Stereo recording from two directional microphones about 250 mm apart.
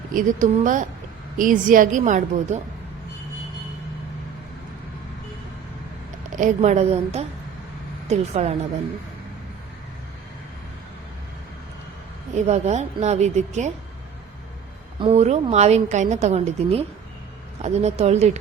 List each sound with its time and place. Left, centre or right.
0.1 s a woman's voice: right
6.3 s a woman's voice: right
12.3 s a woman's voice: right
14.9 s a woman's voice: right